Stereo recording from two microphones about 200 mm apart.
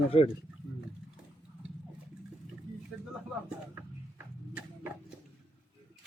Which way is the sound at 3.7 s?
10° right (ahead or behind).